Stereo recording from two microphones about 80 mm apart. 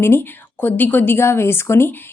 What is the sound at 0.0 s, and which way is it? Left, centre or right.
A woman's voice, left.